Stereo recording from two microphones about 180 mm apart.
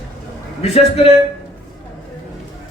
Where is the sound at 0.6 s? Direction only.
35° left (ahead or behind).